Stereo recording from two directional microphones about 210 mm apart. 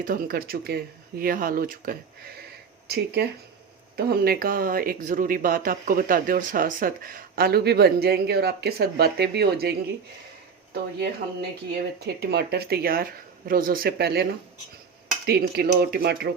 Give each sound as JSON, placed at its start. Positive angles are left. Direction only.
{"t": 0.0, "sound": "speech", "side_deg": -40}
{"t": 11.0, "sound": "speech", "side_deg": -50}
{"t": 15.3, "sound": "speech", "side_deg": -45}